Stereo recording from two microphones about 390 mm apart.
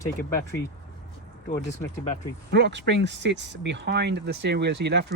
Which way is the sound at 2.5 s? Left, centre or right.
Right.